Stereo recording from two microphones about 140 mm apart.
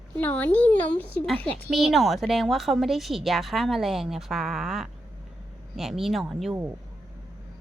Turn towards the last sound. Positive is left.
turn(degrees=0)  # may be behind; listen again after turning